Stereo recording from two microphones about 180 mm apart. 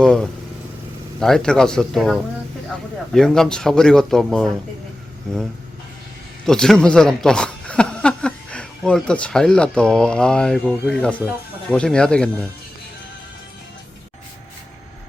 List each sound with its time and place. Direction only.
0.0 s speech: 5° left (ahead or behind)